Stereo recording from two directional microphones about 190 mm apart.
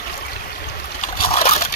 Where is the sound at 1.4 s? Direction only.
40° left (ahead or behind).